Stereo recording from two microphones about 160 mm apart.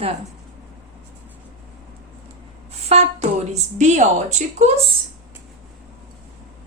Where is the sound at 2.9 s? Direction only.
40° right (ahead or behind).